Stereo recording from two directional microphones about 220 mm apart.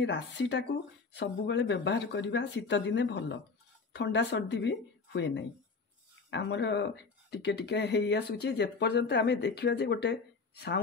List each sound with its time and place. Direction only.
0.0 s speech: 55° left (ahead or behind)